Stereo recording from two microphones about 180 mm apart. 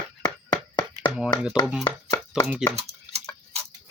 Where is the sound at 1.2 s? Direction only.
5° right (ahead or behind).